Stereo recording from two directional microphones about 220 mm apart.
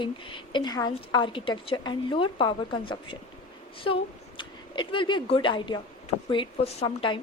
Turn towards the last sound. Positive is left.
turn(degrees=20)  # may be behind; listen again after turning